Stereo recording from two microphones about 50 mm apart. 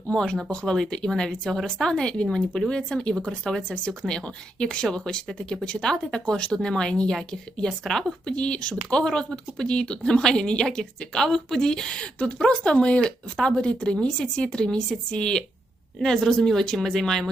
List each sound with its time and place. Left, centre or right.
0.1 s speech: centre
8.4 s speech: centre